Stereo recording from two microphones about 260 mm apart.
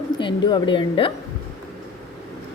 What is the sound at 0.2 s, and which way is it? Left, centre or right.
Speech, centre.